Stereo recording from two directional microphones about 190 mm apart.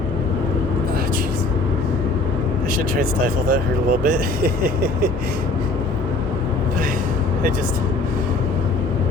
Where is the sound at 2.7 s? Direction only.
50° right (ahead or behind).